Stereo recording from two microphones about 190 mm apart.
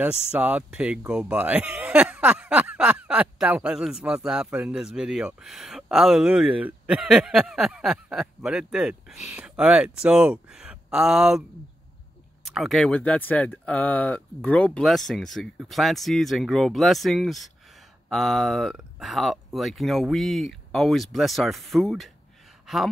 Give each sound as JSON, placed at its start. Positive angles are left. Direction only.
{"t": 0.0, "sound": "speech", "side_deg": -5}
{"t": 12.4, "sound": "speech", "side_deg": 0}